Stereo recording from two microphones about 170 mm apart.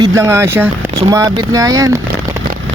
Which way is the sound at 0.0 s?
15° right (ahead or behind).